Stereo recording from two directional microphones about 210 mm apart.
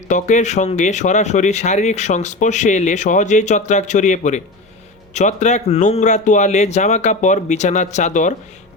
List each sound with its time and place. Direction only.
0.1 s speech: 35° left (ahead or behind)